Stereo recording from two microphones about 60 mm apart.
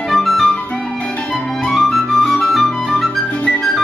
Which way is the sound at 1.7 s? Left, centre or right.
Centre.